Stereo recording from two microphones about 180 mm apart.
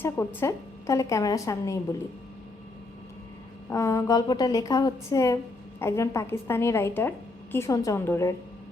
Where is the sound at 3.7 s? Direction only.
15° left (ahead or behind).